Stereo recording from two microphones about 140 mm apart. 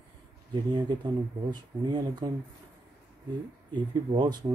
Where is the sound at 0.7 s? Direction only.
35° right (ahead or behind).